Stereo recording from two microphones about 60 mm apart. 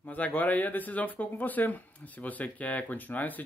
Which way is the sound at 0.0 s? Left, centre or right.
Left.